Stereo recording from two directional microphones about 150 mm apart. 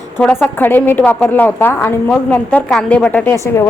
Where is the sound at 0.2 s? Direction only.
5° left (ahead or behind).